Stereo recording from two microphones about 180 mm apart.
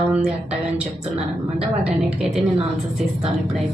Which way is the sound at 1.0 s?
35° right (ahead or behind).